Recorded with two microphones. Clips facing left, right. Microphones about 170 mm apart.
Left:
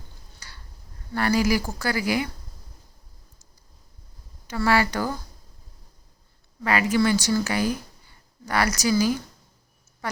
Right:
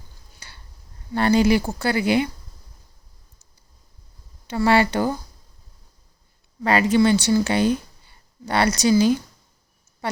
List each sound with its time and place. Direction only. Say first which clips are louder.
0.3 s a sound: right 1 dB; 20° right (ahead or behind)
1.1 s a woman's voice: right 5 dB; 25° right (ahead or behind)
4.4 s a woman's voice: right 4 dB; 25° right (ahead or behind)
6.6 s a woman's voice: right 4 dB; 30° right (ahead or behind)